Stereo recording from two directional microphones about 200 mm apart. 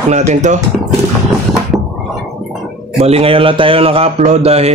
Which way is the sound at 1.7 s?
15° right (ahead or behind).